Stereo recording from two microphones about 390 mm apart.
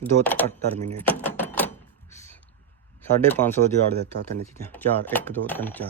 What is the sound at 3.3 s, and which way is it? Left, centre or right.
Speech, centre.